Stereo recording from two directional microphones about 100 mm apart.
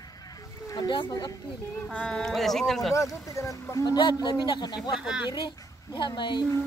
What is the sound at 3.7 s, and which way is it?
Speech, 40° left (ahead or behind).